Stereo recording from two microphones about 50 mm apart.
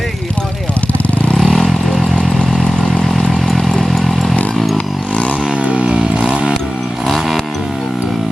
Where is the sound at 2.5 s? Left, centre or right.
Centre.